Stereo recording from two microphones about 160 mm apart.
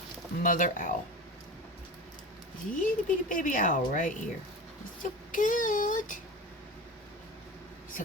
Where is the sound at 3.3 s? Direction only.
55° left (ahead or behind).